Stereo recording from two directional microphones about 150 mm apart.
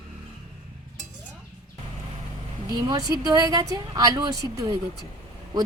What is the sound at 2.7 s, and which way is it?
Speech, 25° right (ahead or behind).